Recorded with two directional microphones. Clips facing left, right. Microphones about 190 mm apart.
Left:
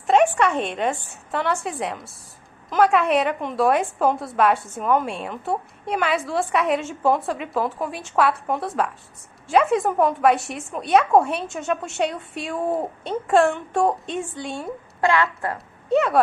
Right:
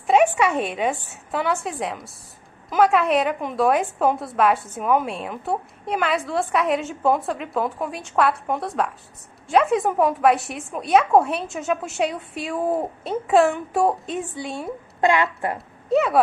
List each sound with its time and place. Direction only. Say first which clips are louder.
0.0 s a woman's voice: even; 5° right (ahead or behind)
15.0 s a woman's voice: right 1 dB; 15° right (ahead or behind)
15.9 s a woman's voice: even; centre (ahead or behind)